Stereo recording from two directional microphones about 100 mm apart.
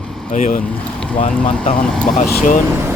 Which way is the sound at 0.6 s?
10° left (ahead or behind).